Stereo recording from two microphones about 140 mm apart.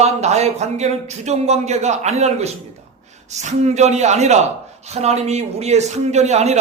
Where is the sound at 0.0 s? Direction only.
50° right (ahead or behind).